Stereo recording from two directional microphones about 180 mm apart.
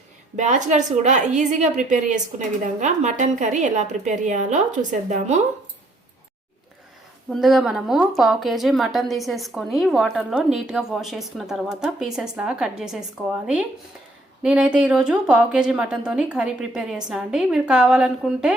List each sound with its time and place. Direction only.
0.3 s a woman's voice: 40° right (ahead or behind)
7.3 s a woman's voice: centre (ahead or behind)